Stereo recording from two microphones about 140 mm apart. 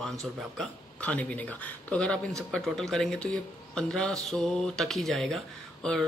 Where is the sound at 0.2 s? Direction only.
Centre (ahead or behind).